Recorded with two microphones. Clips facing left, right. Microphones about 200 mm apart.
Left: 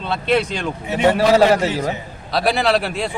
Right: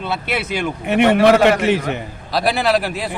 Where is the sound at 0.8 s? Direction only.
65° right (ahead or behind).